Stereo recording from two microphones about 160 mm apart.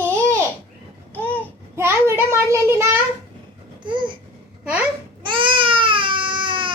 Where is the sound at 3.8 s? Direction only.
30° right (ahead or behind).